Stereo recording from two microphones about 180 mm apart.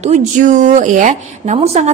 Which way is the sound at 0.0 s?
40° right (ahead or behind).